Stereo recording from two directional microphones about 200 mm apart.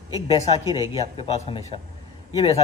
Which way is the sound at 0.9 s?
30° left (ahead or behind).